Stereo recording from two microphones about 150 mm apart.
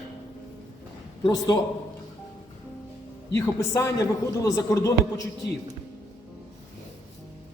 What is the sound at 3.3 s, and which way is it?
A man's voice, 20° left (ahead or behind).